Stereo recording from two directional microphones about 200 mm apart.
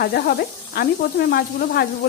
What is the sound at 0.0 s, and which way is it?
Speech, 50° left (ahead or behind).